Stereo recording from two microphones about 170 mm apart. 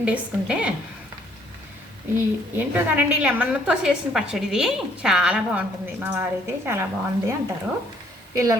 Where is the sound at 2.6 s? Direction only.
10° right (ahead or behind).